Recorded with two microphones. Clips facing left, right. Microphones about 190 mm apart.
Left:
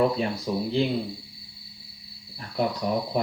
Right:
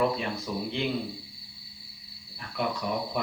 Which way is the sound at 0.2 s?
35° left (ahead or behind).